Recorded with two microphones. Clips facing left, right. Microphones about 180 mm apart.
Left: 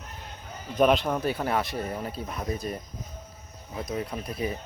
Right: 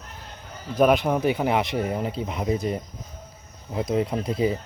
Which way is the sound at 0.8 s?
10° right (ahead or behind).